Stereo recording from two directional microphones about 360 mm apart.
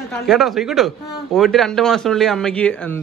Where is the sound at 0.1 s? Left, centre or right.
Centre.